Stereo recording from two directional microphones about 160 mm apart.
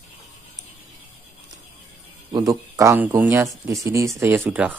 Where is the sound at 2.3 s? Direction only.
20° right (ahead or behind).